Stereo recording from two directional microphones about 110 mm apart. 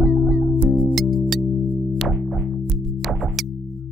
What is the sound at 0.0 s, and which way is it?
Music, 15° right (ahead or behind).